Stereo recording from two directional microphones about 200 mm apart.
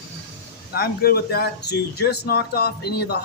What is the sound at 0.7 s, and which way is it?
Speech, 50° left (ahead or behind).